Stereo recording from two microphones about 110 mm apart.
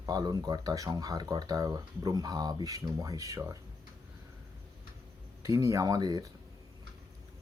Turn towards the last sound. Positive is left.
turn(degrees=-35)  # may be behind; listen again after turning